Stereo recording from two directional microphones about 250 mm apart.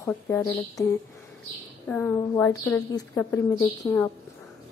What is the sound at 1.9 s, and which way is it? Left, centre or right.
A woman's voice, centre.